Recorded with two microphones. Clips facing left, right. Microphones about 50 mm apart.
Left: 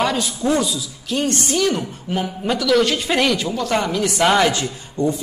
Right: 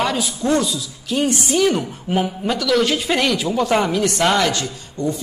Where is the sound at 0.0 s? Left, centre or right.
Centre.